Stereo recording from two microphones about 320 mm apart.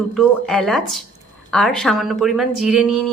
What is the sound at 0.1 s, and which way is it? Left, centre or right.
Speech, centre.